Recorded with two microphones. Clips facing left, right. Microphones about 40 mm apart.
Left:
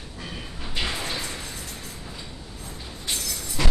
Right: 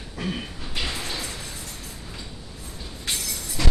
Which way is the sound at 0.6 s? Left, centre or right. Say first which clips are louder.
Left 4 dB; centre.